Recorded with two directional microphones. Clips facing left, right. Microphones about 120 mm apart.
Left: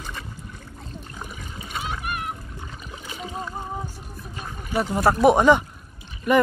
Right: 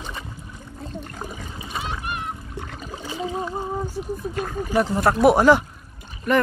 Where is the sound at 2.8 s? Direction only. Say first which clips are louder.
Right 7 dB; 35° right (ahead or behind).